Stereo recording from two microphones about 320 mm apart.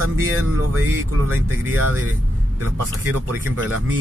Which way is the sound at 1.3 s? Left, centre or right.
Centre.